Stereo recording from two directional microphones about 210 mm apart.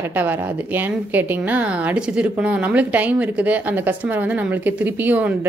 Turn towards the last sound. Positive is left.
turn(degrees=-10)  # may be behind; listen again after turning